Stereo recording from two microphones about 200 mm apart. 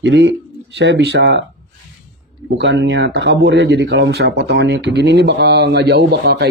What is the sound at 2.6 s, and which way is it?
Speech, 60° right (ahead or behind).